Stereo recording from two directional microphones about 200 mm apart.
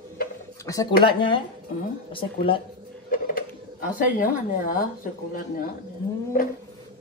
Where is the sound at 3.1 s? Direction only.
45° left (ahead or behind).